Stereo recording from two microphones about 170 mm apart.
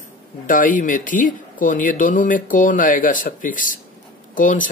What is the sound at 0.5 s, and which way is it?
Speech, 50° left (ahead or behind).